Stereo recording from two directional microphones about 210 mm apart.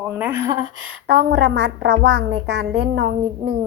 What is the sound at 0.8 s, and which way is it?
A woman's voice, 65° right (ahead or behind).